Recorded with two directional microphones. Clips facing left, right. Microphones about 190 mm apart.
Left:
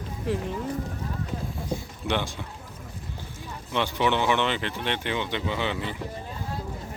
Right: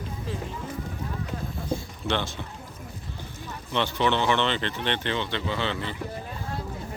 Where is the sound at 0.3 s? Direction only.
65° left (ahead or behind).